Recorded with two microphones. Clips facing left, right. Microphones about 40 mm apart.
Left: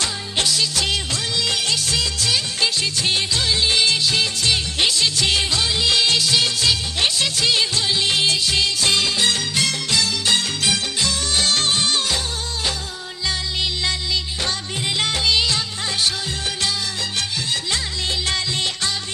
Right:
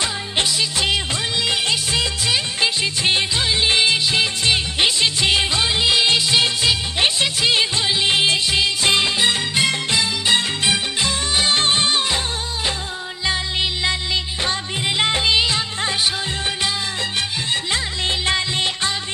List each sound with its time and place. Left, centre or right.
0.0 s music: centre
1.4 s music of bollywood: right
13.2 s music: right
14.9 s music of bollywood: right
18.3 s music: right